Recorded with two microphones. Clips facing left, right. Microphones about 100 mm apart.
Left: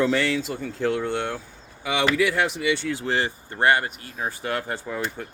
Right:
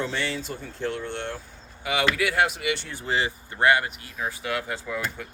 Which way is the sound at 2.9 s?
90° left.